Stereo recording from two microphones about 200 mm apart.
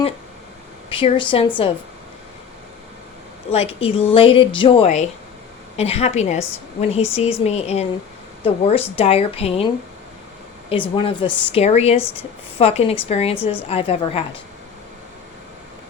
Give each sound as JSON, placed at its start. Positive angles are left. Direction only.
{"t": 0.9, "sound": "a woman's voice", "side_deg": 25}
{"t": 3.5, "sound": "a woman's voice", "side_deg": 30}
{"t": 10.7, "sound": "a woman's voice", "side_deg": 25}